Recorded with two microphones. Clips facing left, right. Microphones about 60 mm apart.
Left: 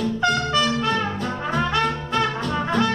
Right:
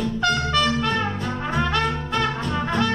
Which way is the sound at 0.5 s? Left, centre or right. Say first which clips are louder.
Even; centre.